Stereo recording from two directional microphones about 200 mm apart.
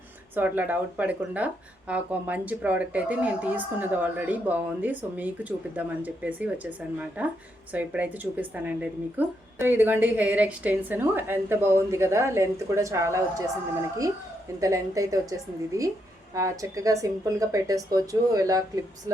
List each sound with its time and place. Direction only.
0.3 s a woman's voice: 10° right (ahead or behind)
14.6 s a woman's voice: 15° right (ahead or behind)